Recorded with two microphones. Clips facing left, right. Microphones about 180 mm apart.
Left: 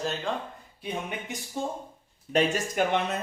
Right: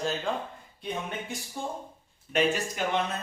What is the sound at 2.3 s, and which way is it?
Speech, 40° left (ahead or behind).